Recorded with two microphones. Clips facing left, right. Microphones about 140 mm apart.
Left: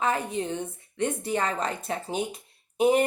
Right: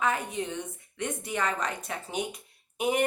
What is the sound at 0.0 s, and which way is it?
Speech, 30° left (ahead or behind).